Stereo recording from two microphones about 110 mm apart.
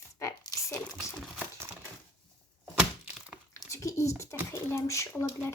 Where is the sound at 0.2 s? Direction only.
30° left (ahead or behind).